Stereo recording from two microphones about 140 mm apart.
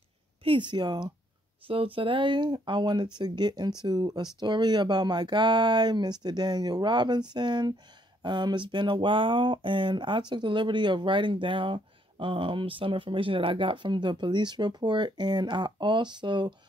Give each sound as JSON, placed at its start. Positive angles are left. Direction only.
{"t": 0.4, "sound": "speech", "side_deg": -35}